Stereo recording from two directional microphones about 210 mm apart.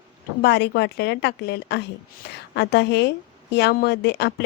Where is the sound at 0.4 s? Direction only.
55° left (ahead or behind).